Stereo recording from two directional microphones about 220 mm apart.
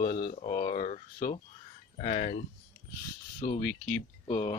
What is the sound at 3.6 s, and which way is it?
Speech, 5° left (ahead or behind).